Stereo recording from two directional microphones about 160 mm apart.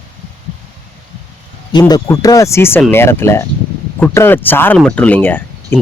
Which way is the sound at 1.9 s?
20° left (ahead or behind).